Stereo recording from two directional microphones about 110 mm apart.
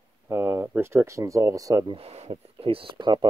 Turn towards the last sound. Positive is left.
turn(degrees=-45)  # may be behind; listen again after turning